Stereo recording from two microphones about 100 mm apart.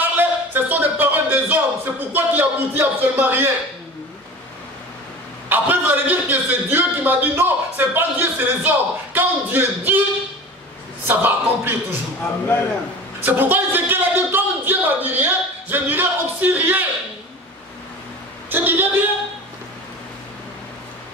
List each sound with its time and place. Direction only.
0.0 s speech: 20° right (ahead or behind)
5.5 s a man's voice: 20° right (ahead or behind)
11.1 s a man's voice: 20° right (ahead or behind)
13.2 s a sound: 20° right (ahead or behind)
18.5 s a woman's voice: 20° right (ahead or behind)